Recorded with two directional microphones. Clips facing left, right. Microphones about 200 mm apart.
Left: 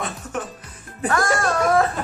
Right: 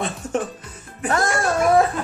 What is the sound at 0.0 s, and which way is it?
Music, 30° right (ahead or behind).